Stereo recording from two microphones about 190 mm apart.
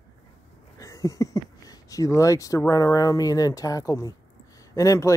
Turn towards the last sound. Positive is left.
turn(degrees=15)  # may be behind; listen again after turning